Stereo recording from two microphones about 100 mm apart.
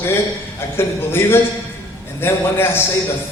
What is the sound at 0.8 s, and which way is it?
A man's voice, 25° left (ahead or behind).